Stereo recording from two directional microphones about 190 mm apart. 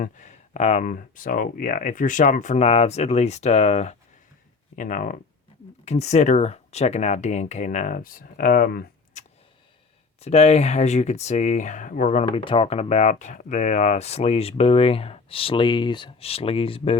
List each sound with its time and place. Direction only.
0.0 s speech: 40° left (ahead or behind)
10.2 s speech: 35° left (ahead or behind)
12.2 s speech: 30° left (ahead or behind)